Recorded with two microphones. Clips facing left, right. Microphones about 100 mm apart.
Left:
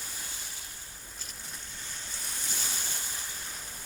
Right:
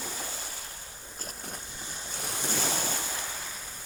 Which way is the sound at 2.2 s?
70° right (ahead or behind).